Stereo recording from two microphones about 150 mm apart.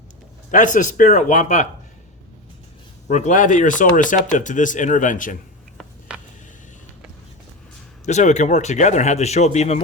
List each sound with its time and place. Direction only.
0.5 s speech: 60° left (ahead or behind)
3.1 s speech: 50° left (ahead or behind)
6.1 s a sound: 5° right (ahead or behind)
8.0 s speech: 50° left (ahead or behind)